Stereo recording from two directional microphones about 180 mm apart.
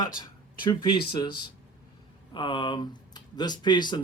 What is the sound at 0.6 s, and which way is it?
Speech, 25° left (ahead or behind).